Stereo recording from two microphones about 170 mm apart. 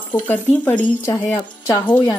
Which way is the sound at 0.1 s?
10° left (ahead or behind).